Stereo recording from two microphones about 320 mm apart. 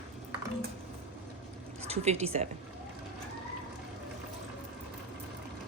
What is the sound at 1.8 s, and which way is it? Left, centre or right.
Speech, centre.